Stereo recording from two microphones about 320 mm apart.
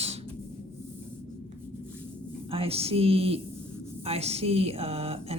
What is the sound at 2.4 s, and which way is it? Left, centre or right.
Speech, centre.